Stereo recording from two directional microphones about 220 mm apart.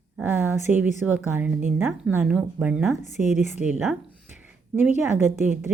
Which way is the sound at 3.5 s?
5° right (ahead or behind).